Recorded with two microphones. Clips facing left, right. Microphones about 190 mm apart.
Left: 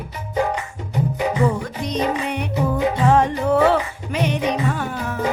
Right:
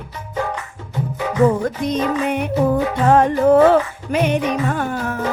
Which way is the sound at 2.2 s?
50° right (ahead or behind).